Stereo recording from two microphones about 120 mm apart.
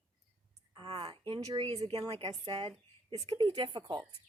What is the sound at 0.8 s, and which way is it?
A woman's voice, 50° right (ahead or behind).